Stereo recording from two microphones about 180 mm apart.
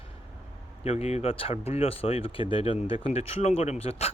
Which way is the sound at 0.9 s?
35° left (ahead or behind).